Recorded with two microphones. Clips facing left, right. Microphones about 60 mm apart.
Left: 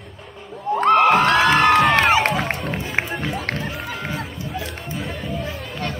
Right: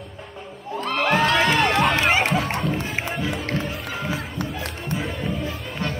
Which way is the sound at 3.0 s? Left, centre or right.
Left.